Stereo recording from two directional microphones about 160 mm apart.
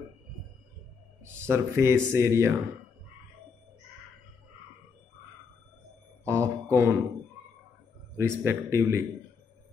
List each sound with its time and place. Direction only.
1.2 s speech: 15° right (ahead or behind)
6.2 s mantra: 15° right (ahead or behind)
8.2 s speech: 15° right (ahead or behind)